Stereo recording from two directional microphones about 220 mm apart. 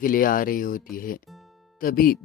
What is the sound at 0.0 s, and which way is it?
Speech, 40° left (ahead or behind).